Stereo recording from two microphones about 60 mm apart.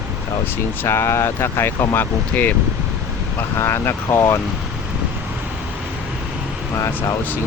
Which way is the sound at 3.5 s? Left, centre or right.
Left.